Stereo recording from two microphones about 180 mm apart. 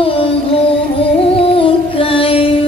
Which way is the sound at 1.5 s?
30° left (ahead or behind).